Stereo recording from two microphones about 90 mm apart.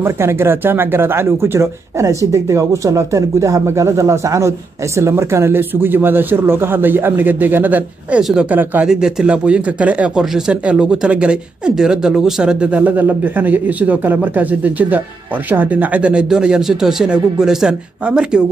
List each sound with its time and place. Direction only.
0.0 s speech: 30° right (ahead or behind)
8.2 s speech: 5° right (ahead or behind)
8.5 s speech: 20° right (ahead or behind)
8.8 s speech: 10° right (ahead or behind)